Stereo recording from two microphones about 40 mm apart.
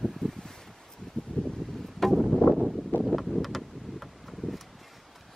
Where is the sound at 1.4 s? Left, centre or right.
Left.